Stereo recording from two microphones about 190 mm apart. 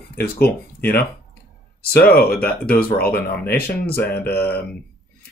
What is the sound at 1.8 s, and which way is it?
Speech, 55° left (ahead or behind).